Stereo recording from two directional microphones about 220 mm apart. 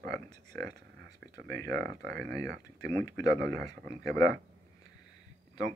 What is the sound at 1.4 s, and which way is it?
Speech, 45° right (ahead or behind).